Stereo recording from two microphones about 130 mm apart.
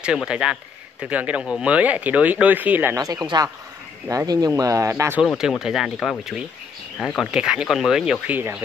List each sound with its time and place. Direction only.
0.0 s speech: 5° right (ahead or behind); by 5.2 s 20° right (ahead or behind)
5.4 s speech: centre (ahead or behind)
7.2 s speech: 5° right (ahead or behind)
8.4 s speech: 15° right (ahead or behind)